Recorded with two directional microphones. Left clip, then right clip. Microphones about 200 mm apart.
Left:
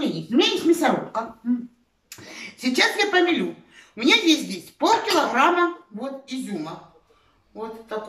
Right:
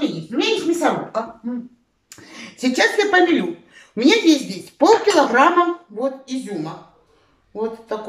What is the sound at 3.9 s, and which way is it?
A woman's voice, 35° right (ahead or behind).